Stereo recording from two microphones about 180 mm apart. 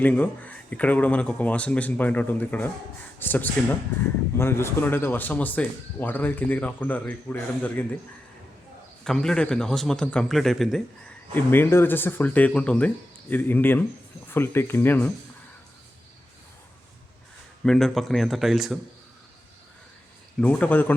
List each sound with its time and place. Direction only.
0.0 s speech: 10° left (ahead or behind)
9.0 s a man's voice: 5° left (ahead or behind)
11.3 s speech: 10° left (ahead or behind)
17.6 s a man's voice: 5° left (ahead or behind)
20.4 s speech: 10° left (ahead or behind)